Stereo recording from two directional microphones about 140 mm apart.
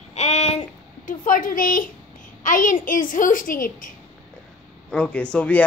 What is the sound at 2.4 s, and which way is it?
A child's voice, 70° left (ahead or behind).